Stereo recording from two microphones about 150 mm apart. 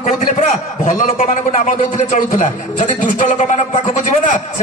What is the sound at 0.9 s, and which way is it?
A man's voice, 60° left (ahead or behind).